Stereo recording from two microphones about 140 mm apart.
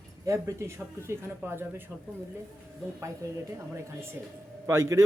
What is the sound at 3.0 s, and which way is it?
Speech, 20° right (ahead or behind).